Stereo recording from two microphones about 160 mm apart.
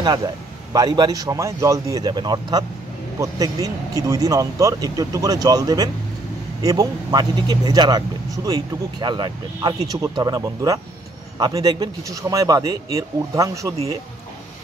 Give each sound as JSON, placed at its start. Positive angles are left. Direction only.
{"t": 0.0, "sound": "a man's voice", "side_deg": -25}